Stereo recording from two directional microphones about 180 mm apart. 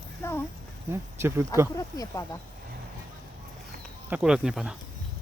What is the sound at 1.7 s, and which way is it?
Speech, 20° left (ahead or behind).